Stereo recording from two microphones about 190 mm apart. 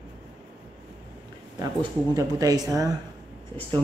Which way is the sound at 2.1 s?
20° right (ahead or behind).